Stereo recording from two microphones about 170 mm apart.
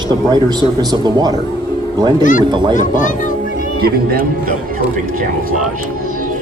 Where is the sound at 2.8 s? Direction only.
50° left (ahead or behind).